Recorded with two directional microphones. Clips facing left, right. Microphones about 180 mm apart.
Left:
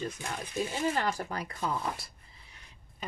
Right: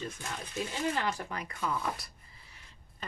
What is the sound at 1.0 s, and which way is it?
Speech, 35° left (ahead or behind).